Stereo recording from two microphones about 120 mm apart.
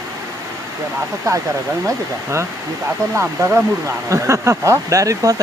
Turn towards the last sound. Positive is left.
turn(degrees=-30)  # may be behind; listen again after turning